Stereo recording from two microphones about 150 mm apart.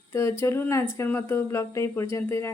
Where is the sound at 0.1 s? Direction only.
15° left (ahead or behind).